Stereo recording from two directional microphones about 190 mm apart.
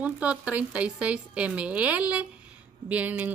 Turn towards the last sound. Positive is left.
turn(degrees=-10)  # may be behind; listen again after turning